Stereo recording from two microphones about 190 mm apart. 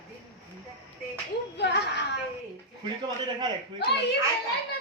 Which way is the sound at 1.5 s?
65° left (ahead or behind).